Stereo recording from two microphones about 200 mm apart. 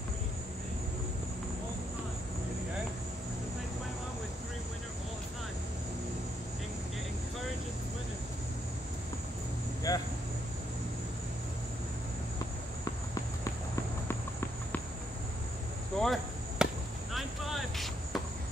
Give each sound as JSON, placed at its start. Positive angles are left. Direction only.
{"t": 9.9, "sound": "vehicle", "side_deg": 20}
{"t": 16.0, "sound": "chop", "side_deg": 0}
{"t": 17.1, "sound": "basketball bounce", "side_deg": 0}